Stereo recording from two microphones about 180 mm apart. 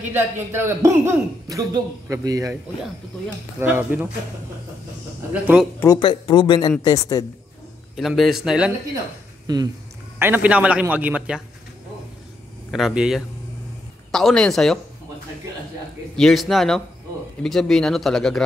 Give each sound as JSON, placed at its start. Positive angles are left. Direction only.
{"t": 0.1, "sound": "a man's voice", "side_deg": -15}
{"t": 3.5, "sound": "a man's voice", "side_deg": -15}
{"t": 5.3, "sound": "speech", "side_deg": -5}
{"t": 5.8, "sound": "speech", "side_deg": 20}
{"t": 7.9, "sound": "speech", "side_deg": 0}
{"t": 9.5, "sound": "speech", "side_deg": -20}
{"t": 10.1, "sound": "a man's voice", "side_deg": -10}
{"t": 12.7, "sound": "speech", "side_deg": 0}
{"t": 16.2, "sound": "speech", "side_deg": 0}